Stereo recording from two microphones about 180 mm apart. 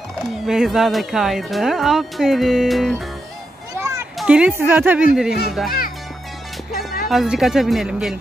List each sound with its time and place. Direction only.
0.5 s speech: centre (ahead or behind)
3.7 s children playing: 15° right (ahead or behind)
4.2 s speech: 5° right (ahead or behind)
7.1 s speech: centre (ahead or behind)